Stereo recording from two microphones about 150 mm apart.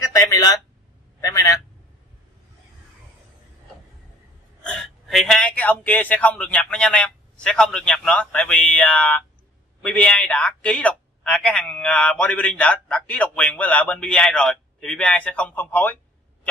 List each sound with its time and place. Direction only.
0.0 s speech: 20° left (ahead or behind)
1.2 s a sound: 25° left (ahead or behind)
4.6 s speech: 5° left (ahead or behind)